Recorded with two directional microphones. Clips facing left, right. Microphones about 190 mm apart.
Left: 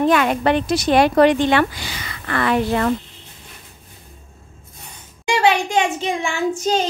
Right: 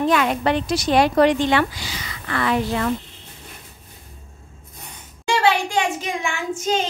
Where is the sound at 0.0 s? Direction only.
55° left (ahead or behind).